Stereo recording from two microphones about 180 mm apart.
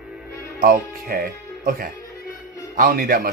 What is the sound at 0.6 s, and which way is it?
Speech, 50° right (ahead or behind).